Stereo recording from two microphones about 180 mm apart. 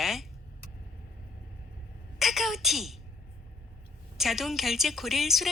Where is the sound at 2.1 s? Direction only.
Centre (ahead or behind).